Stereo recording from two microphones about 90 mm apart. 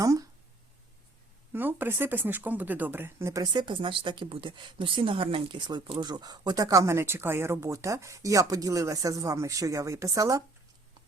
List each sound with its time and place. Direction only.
0.0 s a sound: 40° right (ahead or behind)
1.5 s speech: 25° right (ahead or behind)
3.4 s a woman's voice: 50° right (ahead or behind)